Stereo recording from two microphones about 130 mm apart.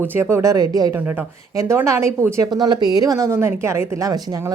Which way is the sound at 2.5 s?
35° right (ahead or behind).